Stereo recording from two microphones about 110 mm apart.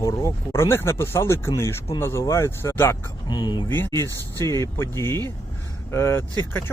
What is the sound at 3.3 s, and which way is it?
Speech, 40° left (ahead or behind).